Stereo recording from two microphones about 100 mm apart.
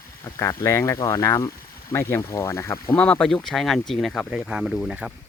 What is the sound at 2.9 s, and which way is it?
Speech, 15° left (ahead or behind).